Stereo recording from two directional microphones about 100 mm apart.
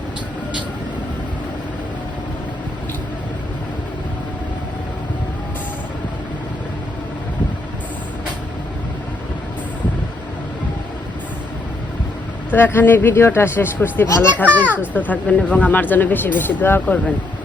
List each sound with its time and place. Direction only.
12.5 s a child's voice: 20° left (ahead or behind)